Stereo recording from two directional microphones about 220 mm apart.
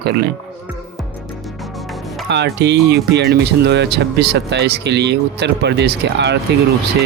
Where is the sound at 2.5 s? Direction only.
50° right (ahead or behind).